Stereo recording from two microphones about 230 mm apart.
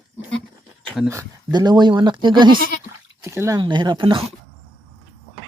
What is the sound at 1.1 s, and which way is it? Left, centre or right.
Speech, centre.